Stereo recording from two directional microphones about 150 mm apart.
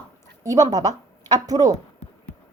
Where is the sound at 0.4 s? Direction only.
25° right (ahead or behind).